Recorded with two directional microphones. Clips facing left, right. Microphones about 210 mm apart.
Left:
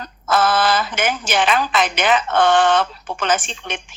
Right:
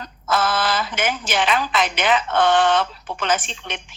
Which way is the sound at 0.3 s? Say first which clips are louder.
Left 4 dB; 50° left (ahead or behind).